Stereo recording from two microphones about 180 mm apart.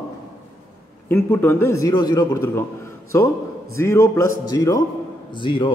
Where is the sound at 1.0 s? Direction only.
10° left (ahead or behind).